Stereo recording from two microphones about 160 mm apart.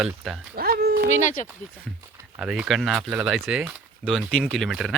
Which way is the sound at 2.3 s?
5° right (ahead or behind).